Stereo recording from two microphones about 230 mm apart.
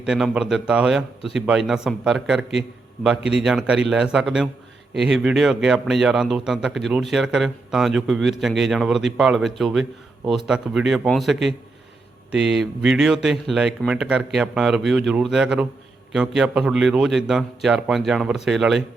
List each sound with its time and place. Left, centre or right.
0.0 s a man's voice: centre